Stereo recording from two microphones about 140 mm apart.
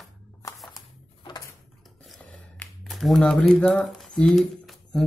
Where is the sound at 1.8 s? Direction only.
Centre (ahead or behind).